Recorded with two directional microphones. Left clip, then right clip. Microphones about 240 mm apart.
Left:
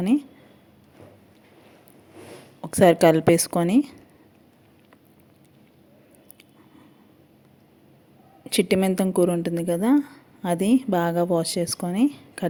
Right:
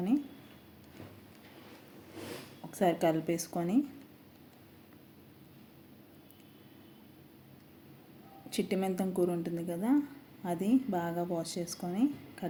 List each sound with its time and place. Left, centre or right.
2.6 s a woman's voice: left
8.4 s a woman's voice: left